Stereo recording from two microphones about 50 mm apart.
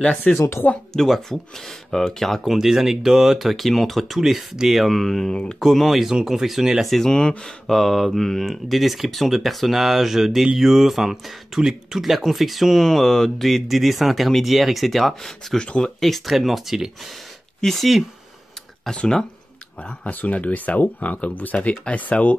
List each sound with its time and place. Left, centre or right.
0.3 s speech: left
0.9 s speech: centre
5.3 s speech: centre
5.6 s speech: centre
7.1 s speech: centre
7.6 s speech: centre
19.8 s speech: left